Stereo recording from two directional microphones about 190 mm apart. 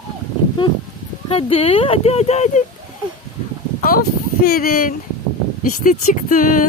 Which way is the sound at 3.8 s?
50° left (ahead or behind).